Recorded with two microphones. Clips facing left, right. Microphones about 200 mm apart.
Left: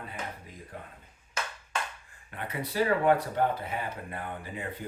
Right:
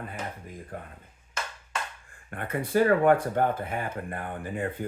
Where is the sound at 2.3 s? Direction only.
50° right (ahead or behind).